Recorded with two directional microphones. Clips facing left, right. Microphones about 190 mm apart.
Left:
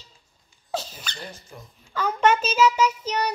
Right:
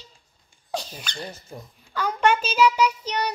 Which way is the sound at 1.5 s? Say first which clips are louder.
Right 4 dB; 30° right (ahead or behind).